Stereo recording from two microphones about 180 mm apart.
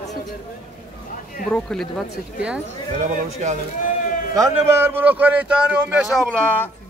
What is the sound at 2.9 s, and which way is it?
Speech, 45° right (ahead or behind).